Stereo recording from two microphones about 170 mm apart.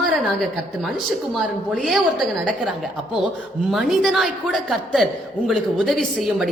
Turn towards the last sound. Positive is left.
turn(degrees=0)  # may be behind; listen again after turning